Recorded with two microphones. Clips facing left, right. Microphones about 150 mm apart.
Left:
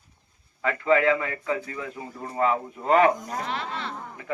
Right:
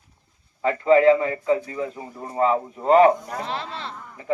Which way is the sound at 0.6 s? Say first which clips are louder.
Right 6 dB; 30° right (ahead or behind).